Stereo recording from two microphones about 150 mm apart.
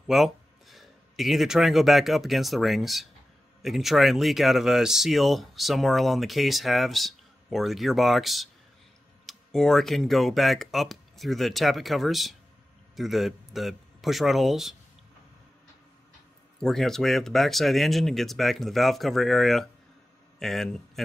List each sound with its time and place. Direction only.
0.0 s a man's voice: centre (ahead or behind)
16.5 s a man's voice: 5° left (ahead or behind)